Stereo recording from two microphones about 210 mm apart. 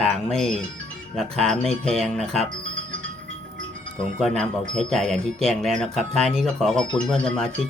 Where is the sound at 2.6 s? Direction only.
65° right (ahead or behind).